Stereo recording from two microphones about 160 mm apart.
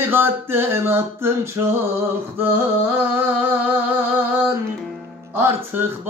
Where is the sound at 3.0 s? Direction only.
10° right (ahead or behind).